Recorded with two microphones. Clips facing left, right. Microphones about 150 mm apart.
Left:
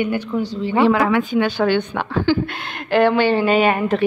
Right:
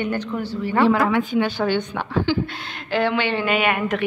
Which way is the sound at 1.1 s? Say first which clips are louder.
Left 2 dB; 90° left.